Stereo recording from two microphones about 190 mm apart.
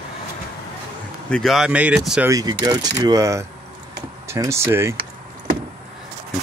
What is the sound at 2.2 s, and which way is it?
Speech, 20° right (ahead or behind).